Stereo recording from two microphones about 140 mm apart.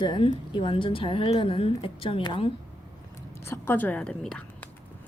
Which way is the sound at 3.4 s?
15° left (ahead or behind).